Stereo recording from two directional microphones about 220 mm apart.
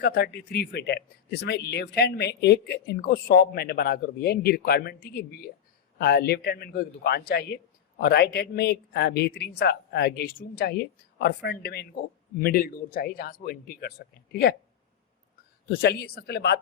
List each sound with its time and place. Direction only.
0.0 s a man's voice: 45° left (ahead or behind)
15.7 s a man's voice: 45° left (ahead or behind)